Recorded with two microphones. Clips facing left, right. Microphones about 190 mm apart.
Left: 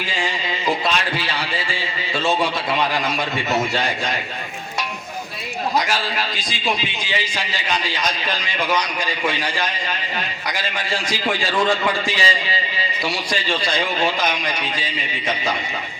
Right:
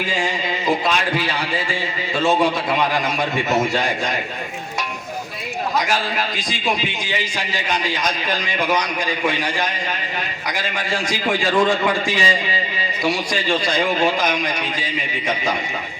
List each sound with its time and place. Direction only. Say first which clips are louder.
5.9 s a man's voice: right 2 dB; 50° right (ahead or behind)
12.0 s a man's voice: right 2 dB; 45° right (ahead or behind)